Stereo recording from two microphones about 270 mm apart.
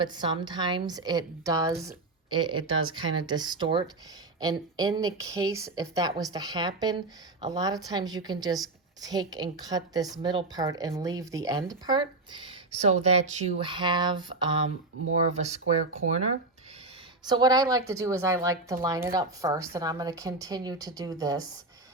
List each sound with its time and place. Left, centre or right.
0.0 s a woman's voice: centre
17.2 s a woman's voice: centre